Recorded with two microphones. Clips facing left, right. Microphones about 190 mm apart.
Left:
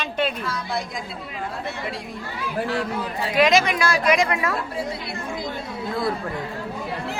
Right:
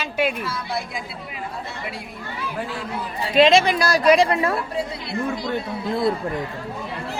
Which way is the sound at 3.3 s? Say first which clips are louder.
Right 3 dB; 30° right (ahead or behind).